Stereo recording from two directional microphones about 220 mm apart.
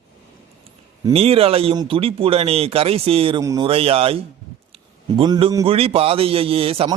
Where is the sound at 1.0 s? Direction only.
25° right (ahead or behind).